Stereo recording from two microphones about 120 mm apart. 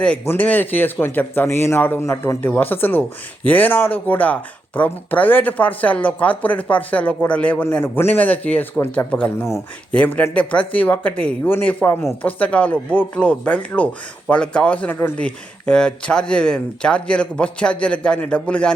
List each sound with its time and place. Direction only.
0.0 s speech: 10° left (ahead or behind)